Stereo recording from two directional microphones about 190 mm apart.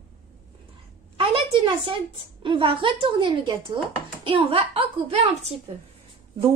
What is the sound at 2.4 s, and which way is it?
A woman's voice, 25° right (ahead or behind).